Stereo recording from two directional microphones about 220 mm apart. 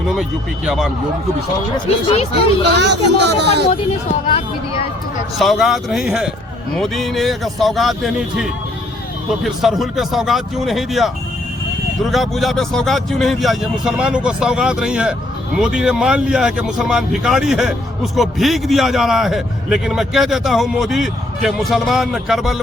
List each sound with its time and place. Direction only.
0.2 s speech: centre (ahead or behind)
2.0 s speech: 25° left (ahead or behind)
2.7 s speech: 50° right (ahead or behind)
5.4 s speech: centre (ahead or behind)
12.1 s speech: centre (ahead or behind)